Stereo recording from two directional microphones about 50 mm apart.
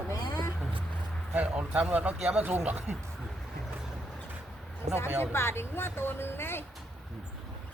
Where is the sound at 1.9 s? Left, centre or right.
Right.